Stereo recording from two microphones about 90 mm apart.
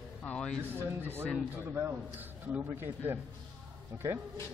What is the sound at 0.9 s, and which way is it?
A man's voice, 25° right (ahead or behind).